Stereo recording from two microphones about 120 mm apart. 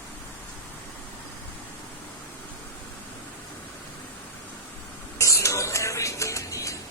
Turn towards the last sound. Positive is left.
turn(degrees=25)  # may be behind; listen again after turning